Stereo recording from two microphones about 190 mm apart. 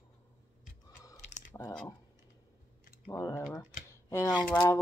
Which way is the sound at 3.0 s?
15° left (ahead or behind).